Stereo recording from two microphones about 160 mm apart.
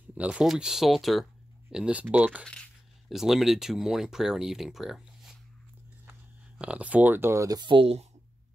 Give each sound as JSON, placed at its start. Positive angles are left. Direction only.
{"t": 0.1, "sound": "speech", "side_deg": -10}
{"t": 2.4, "sound": "speech", "side_deg": 5}
{"t": 6.6, "sound": "speech", "side_deg": -10}